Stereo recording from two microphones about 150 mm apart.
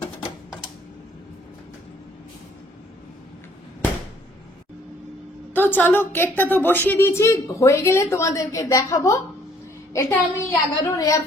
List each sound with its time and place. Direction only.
5.5 s a woman's voice: 10° left (ahead or behind)